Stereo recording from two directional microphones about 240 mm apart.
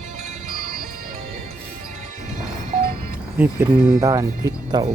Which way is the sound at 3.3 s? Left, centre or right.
Centre.